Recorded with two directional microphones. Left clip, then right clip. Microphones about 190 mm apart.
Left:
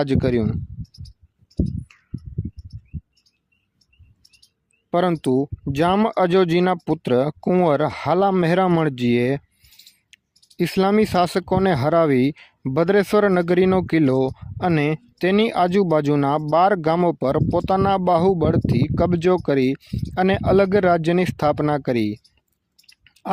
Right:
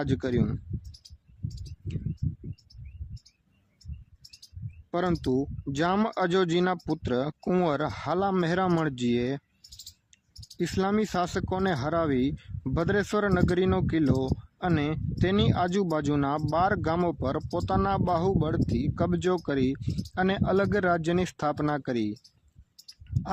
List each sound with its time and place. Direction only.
0.0 s speech: 35° left (ahead or behind)
0.8 s a sound: 55° right (ahead or behind)
4.2 s bird: 55° right (ahead or behind)
4.9 s speech: 35° left (ahead or behind)
10.3 s clicking: 55° right (ahead or behind)
10.6 s speech: 35° left (ahead or behind)
23.0 s a sound: 30° left (ahead or behind)